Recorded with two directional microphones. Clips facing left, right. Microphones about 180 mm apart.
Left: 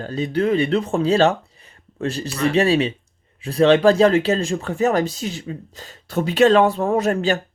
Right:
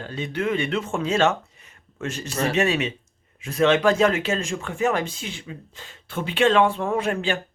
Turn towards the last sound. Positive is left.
turn(degrees=40)  # may be behind; listen again after turning